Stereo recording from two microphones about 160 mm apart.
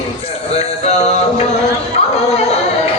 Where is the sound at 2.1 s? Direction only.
45° left (ahead or behind).